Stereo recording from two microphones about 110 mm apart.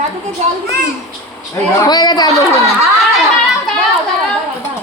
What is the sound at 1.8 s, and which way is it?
Speech, 40° left (ahead or behind).